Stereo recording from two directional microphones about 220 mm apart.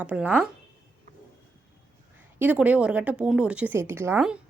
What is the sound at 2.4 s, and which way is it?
Speech, 5° right (ahead or behind).